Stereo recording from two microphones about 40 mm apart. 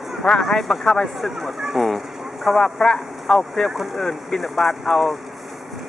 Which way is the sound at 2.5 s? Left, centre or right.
Centre.